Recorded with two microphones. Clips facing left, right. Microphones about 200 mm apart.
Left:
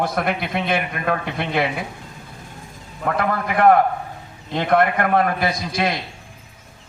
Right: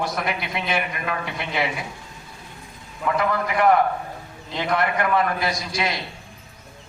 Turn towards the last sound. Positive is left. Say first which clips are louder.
# left 4 dB
turn(degrees=55)  # may be behind; listen again after turning